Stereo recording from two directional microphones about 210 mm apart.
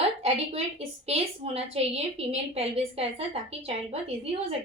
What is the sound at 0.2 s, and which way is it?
A woman's voice, 30° right (ahead or behind).